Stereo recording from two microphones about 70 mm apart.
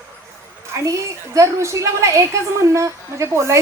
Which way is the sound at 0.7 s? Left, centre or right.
Right.